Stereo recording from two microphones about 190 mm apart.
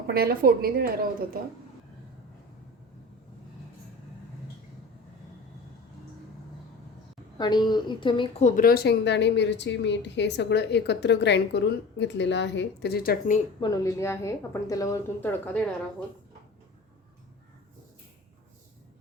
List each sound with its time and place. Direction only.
0.1 s a woman's voice: 55° right (ahead or behind)
7.3 s a woman's voice: 20° left (ahead or behind)
8.4 s a woman's voice: 45° left (ahead or behind)
13.6 s a woman's voice: 20° left (ahead or behind)